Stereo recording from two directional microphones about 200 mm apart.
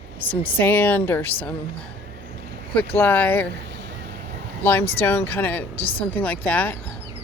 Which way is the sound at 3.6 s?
60° right (ahead or behind).